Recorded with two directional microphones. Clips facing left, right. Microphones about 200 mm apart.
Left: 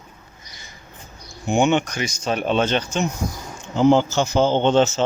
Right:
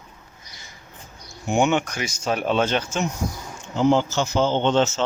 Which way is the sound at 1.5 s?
5° right (ahead or behind).